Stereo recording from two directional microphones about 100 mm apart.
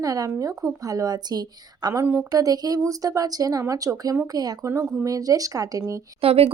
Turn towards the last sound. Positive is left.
turn(degrees=-70)  # may be behind; listen again after turning